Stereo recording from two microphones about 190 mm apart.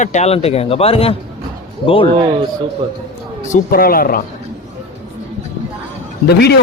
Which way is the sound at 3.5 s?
50° left (ahead or behind).